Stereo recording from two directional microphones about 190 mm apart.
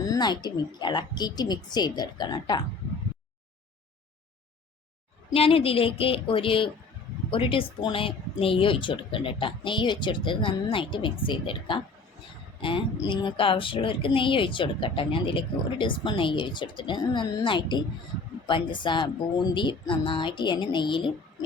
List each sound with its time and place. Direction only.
0.1 s a woman's voice: 20° left (ahead or behind)
5.3 s a woman's voice: 30° left (ahead or behind)